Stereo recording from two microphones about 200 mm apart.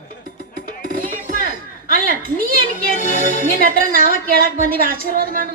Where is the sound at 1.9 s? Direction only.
45° right (ahead or behind).